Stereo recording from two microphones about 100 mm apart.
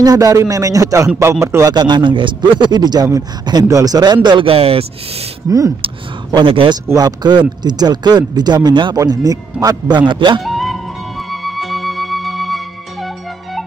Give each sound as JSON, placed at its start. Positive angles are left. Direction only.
{"t": 0.0, "sound": "a man's voice", "side_deg": -35}
{"t": 1.7, "sound": "speech", "side_deg": -45}
{"t": 4.5, "sound": "speech", "side_deg": -75}
{"t": 6.3, "sound": "speech", "side_deg": -55}
{"t": 7.0, "sound": "speech", "side_deg": -45}
{"t": 10.4, "sound": "music", "side_deg": 0}